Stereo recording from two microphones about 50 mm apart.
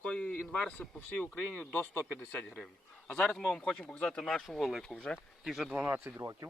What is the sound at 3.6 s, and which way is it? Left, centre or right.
Speech, left.